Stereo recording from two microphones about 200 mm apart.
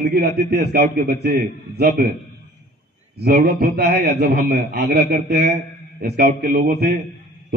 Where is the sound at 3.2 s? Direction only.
50° right (ahead or behind).